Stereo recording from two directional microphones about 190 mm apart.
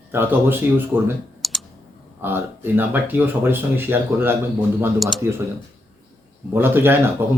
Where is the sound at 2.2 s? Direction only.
10° right (ahead or behind).